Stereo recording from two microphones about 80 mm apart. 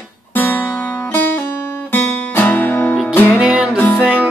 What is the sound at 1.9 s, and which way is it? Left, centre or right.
Music, left.